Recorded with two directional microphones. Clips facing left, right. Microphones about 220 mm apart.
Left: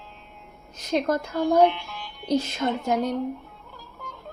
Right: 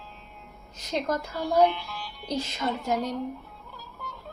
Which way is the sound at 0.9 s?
50° left (ahead or behind).